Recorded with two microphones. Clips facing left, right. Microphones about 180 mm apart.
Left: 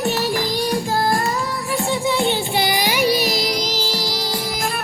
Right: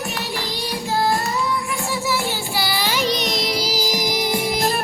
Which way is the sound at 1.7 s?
35° left (ahead or behind).